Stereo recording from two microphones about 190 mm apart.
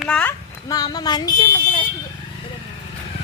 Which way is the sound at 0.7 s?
20° left (ahead or behind).